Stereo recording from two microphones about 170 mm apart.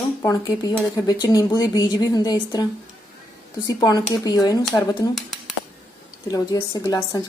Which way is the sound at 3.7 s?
20° left (ahead or behind).